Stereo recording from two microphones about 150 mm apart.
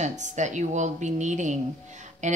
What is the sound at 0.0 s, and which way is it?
Speech, 50° right (ahead or behind).